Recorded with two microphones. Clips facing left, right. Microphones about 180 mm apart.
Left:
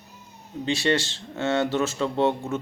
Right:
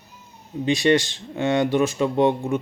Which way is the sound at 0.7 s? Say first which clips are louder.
Right 5 dB; 15° right (ahead or behind).